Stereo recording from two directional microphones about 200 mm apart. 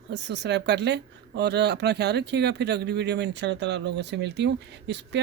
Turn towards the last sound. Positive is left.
turn(degrees=-60)  # may be behind; listen again after turning